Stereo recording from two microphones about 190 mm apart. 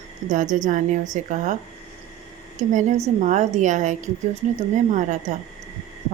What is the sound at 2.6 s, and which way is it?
A woman's voice, 40° right (ahead or behind).